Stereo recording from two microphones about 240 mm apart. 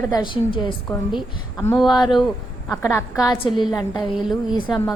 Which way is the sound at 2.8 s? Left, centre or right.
Centre.